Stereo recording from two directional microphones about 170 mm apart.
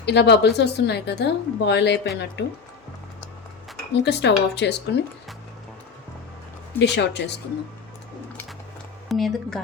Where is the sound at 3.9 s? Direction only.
85° left.